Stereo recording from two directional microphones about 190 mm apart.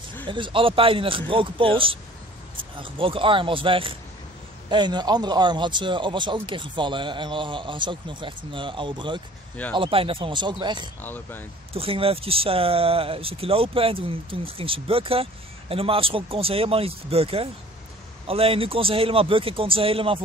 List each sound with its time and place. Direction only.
0.3 s speech: 25° right (ahead or behind)
11.0 s speech: 10° left (ahead or behind)
11.7 s speech: 30° right (ahead or behind)